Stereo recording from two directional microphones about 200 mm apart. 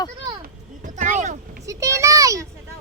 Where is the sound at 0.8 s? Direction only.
40° right (ahead or behind).